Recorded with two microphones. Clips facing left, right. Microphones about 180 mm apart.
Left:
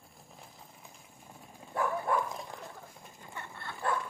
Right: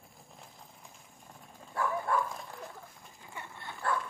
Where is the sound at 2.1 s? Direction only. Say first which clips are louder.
Even; 20° left (ahead or behind).